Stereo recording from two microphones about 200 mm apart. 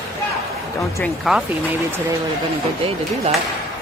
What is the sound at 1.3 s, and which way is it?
Speech, centre (ahead or behind).